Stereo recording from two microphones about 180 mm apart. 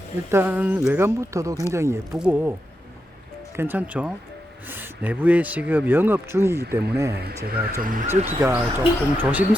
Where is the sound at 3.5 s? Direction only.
10° right (ahead or behind).